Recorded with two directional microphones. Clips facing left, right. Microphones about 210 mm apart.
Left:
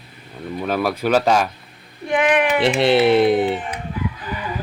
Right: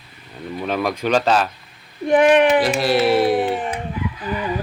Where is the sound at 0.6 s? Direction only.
5° left (ahead or behind).